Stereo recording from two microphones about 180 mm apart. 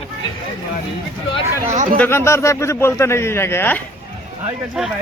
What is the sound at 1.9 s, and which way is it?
A man's voice, 10° left (ahead or behind).